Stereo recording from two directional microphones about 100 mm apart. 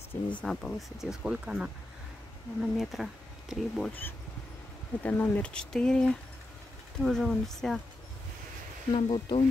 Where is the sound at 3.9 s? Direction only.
20° left (ahead or behind); by 7.8 s centre (ahead or behind).